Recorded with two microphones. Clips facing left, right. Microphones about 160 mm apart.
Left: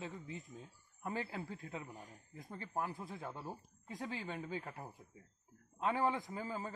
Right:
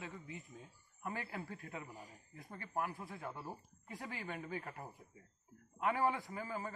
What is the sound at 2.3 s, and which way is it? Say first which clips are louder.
A woman's voice: even; 15° left (ahead or behind).